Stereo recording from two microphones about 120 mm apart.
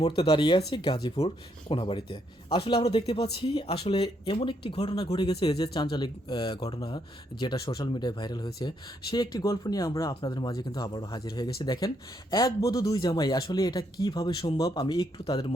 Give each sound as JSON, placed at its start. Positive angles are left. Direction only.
{"t": 0.0, "sound": "speech", "side_deg": 50}